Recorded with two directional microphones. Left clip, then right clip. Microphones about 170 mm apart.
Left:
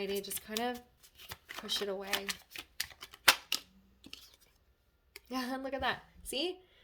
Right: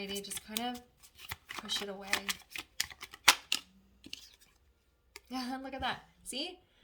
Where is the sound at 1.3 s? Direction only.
5° right (ahead or behind).